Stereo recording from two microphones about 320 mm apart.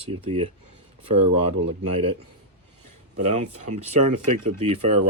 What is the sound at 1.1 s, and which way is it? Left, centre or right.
Speech, right.